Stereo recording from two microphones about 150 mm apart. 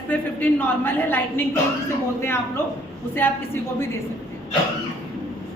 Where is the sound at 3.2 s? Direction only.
15° left (ahead or behind).